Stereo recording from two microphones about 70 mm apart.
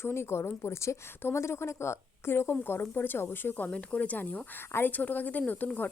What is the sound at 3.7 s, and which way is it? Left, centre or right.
Speech, centre.